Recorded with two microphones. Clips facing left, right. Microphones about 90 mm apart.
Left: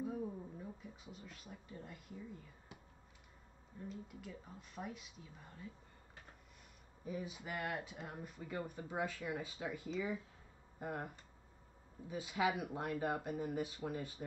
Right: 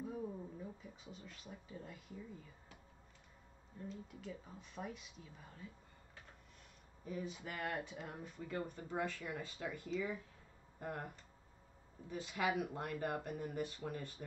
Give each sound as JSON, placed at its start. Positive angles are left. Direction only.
{"t": 0.0, "sound": "a sound", "side_deg": 0}
{"t": 3.9, "sound": "speech", "side_deg": 5}
{"t": 7.1, "sound": "speech", "side_deg": 5}
{"t": 12.1, "sound": "speech", "side_deg": 10}